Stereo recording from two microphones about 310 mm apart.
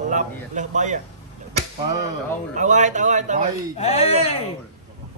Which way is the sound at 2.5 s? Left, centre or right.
Right.